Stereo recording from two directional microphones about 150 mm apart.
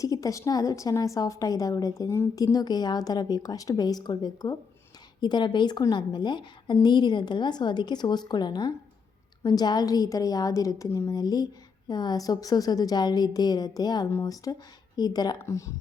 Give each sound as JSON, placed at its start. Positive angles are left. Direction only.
{"t": 0.0, "sound": "a woman's voice", "side_deg": 25}